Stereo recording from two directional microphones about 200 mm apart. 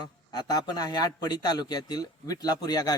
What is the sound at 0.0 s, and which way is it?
A man's voice, 20° left (ahead or behind).